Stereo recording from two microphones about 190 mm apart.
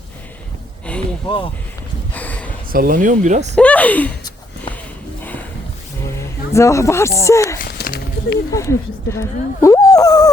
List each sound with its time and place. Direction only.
2.1 s a sound: 10° left (ahead or behind)
2.7 s speech: 45° right (ahead or behind)
3.5 s speech: 5° left (ahead or behind)
6.1 s speech: 15° left (ahead or behind)
7.6 s a sound: 55° left (ahead or behind)
8.5 s speech: 15° left (ahead or behind)